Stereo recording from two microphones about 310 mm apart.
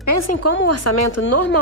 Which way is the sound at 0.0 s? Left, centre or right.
Left.